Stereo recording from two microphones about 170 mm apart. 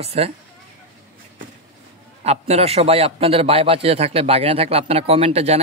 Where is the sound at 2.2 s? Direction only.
40° right (ahead or behind).